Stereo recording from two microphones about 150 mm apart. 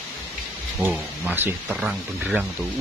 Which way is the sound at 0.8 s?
10° right (ahead or behind).